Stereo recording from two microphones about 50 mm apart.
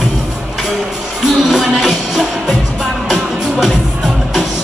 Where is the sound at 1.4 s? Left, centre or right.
Centre.